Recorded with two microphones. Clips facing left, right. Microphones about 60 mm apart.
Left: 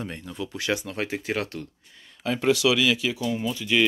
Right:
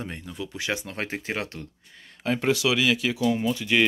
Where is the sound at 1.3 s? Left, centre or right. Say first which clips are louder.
Left 2 dB; right.